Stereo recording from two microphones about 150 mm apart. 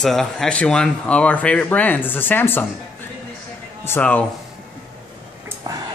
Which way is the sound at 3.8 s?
10° left (ahead or behind).